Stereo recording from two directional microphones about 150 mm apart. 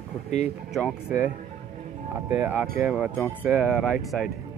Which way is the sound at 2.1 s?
15° right (ahead or behind).